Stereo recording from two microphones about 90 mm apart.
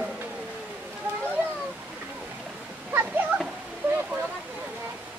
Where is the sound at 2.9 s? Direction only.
20° right (ahead or behind).